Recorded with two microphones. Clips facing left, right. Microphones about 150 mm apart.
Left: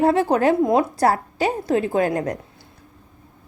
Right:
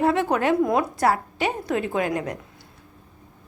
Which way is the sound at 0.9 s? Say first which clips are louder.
Left 3 dB; 40° left (ahead or behind).